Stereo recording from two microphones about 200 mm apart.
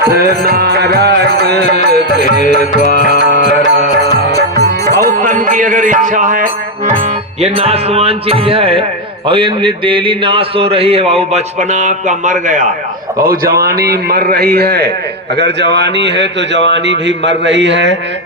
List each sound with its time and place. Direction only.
0.0 s music: 50° right (ahead or behind)
2.4 s music: 40° left (ahead or behind)
3.0 s tabla: 55° right (ahead or behind)
3.5 s music: 35° left (ahead or behind)
5.0 s music: 40° right (ahead or behind)
7.4 s a man's voice: 30° right (ahead or behind); by 17.9 s 60° right (ahead or behind)